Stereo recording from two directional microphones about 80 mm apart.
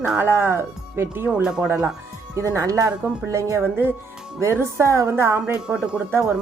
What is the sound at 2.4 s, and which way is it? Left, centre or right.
Speech, right.